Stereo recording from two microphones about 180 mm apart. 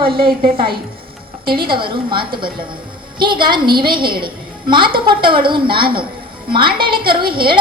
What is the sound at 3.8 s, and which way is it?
Speech, 55° right (ahead or behind).